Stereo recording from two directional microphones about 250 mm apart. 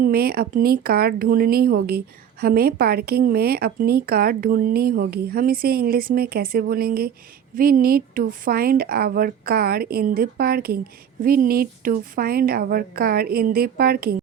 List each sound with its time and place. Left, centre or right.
0.0 s a woman's voice: right